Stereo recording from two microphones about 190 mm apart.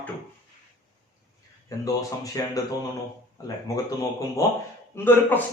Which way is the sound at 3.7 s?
20° left (ahead or behind).